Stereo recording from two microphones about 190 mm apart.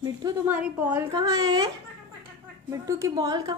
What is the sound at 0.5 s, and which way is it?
A woman's voice, 10° right (ahead or behind).